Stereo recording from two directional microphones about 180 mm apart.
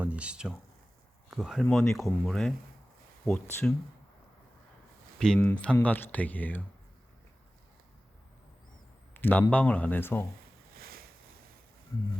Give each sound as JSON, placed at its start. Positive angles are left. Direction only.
{"t": 0.0, "sound": "speech", "side_deg": -5}
{"t": 5.2, "sound": "speech", "side_deg": 5}
{"t": 9.1, "sound": "speech", "side_deg": 10}
{"t": 10.8, "sound": "a sound", "side_deg": -55}